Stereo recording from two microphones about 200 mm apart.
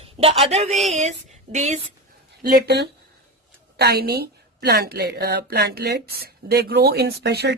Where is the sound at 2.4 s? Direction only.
50° right (ahead or behind).